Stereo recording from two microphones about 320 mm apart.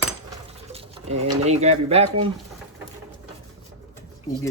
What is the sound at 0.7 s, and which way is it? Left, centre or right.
Speech, centre.